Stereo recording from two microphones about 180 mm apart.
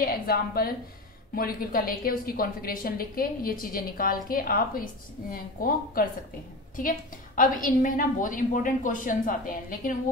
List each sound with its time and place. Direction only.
0.0 s a woman's voice: 55° left (ahead or behind)